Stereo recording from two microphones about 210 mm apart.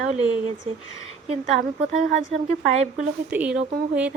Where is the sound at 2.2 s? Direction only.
30° right (ahead or behind).